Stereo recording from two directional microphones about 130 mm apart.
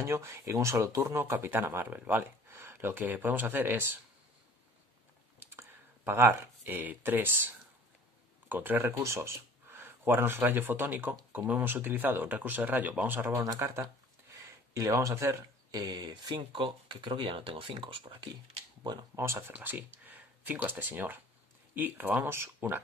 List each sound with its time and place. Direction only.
0.0 s speech: 20° right (ahead or behind)
5.4 s speech: 15° right (ahead or behind); by 18.3 s 40° right (ahead or behind)
19.1 s speech: 20° right (ahead or behind)